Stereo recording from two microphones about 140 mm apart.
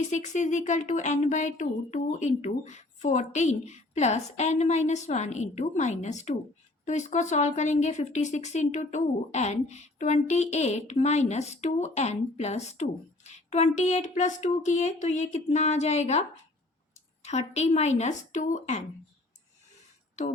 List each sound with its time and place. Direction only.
0.1 s speech: 60° left (ahead or behind)
17.2 s speech: 50° left (ahead or behind)